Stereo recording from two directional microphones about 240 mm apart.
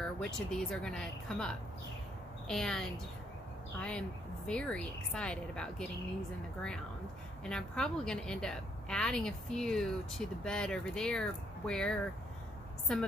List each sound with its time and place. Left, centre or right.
0.2 s a woman's voice: centre
7.4 s a woman's voice: centre